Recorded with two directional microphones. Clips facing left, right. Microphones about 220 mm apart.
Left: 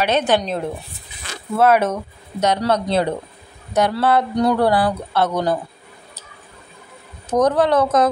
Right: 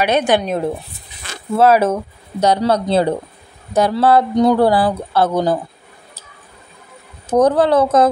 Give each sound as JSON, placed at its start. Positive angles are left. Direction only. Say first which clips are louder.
{"t": 0.0, "sound": "a woman's voice", "louder": "right 3 dB", "side_deg": -10}
{"t": 1.6, "sound": "a man's voice", "louder": "right 3 dB", "side_deg": -30}
{"t": 7.2, "sound": "speech", "louder": "right 3 dB", "side_deg": -30}